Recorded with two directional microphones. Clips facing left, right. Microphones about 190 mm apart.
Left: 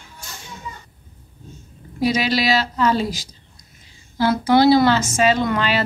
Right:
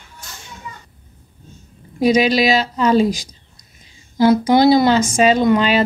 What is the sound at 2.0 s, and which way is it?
Speech, 15° right (ahead or behind).